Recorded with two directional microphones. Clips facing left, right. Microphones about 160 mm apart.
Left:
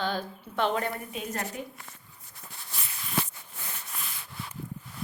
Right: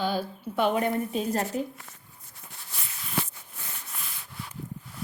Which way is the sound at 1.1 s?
35° right (ahead or behind).